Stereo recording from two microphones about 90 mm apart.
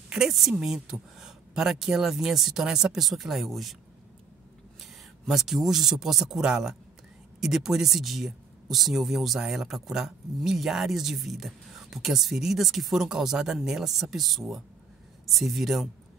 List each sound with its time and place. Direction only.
0.1 s speech: 5° right (ahead or behind)
5.2 s speech: 5° right (ahead or behind)